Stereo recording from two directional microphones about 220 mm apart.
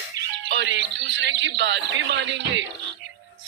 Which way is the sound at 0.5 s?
55° right (ahead or behind).